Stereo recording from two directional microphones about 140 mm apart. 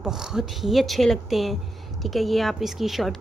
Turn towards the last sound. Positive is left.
turn(degrees=0)  # may be behind; listen again after turning